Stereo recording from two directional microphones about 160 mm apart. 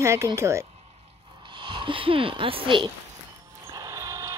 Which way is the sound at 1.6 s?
30° right (ahead or behind).